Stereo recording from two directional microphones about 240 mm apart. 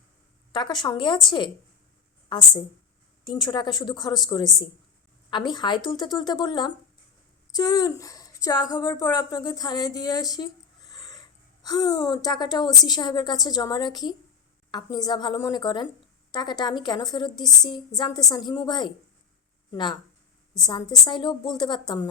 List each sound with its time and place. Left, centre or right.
0.5 s speech: centre
3.2 s a woman's voice: centre